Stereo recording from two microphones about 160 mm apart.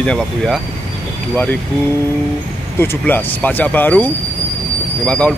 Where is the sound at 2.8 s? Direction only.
15° left (ahead or behind).